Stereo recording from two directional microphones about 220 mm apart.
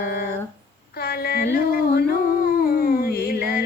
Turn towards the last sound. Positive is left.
turn(degrees=45)  # may be behind; listen again after turning